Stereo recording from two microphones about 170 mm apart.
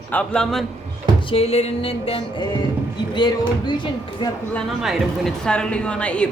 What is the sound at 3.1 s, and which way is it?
Speech, 25° left (ahead or behind).